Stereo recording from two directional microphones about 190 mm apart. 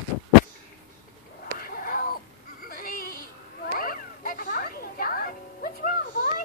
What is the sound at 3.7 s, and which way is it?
Music, 50° left (ahead or behind).